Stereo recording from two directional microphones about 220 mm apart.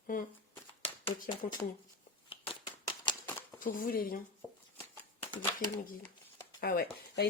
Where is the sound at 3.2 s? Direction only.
10° left (ahead or behind).